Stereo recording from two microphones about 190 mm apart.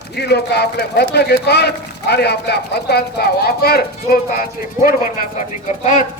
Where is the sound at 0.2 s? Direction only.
60° left (ahead or behind).